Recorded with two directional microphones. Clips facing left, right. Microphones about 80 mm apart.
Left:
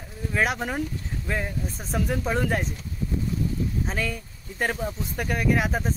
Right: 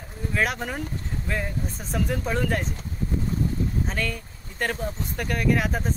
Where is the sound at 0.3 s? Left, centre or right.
Centre.